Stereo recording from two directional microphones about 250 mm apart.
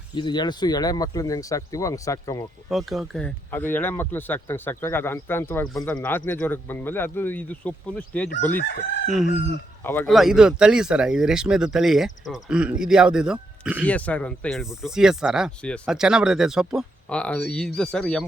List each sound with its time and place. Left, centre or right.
0.1 s speech: centre
2.6 s speech: centre
8.5 s chicken: left
9.8 s speech: centre
13.8 s speech: centre